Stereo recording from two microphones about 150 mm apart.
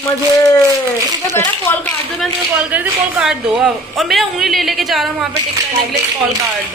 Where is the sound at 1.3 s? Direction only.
15° left (ahead or behind).